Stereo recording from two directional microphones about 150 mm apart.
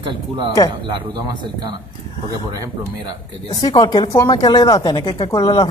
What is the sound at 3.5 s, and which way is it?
Speech, 25° left (ahead or behind).